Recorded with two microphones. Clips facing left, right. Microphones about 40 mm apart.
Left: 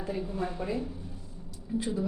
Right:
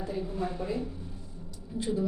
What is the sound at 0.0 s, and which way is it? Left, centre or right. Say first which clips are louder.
A woman's voice: even; centre.